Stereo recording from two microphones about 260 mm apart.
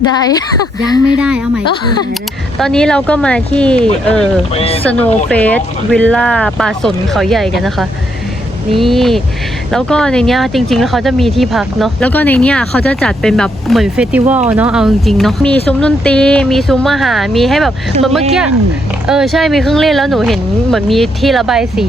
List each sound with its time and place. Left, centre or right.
1.2 s speech: centre
4.5 s speech: left
4.9 s speech: centre